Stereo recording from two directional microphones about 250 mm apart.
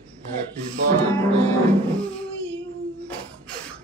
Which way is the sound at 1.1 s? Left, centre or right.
Centre.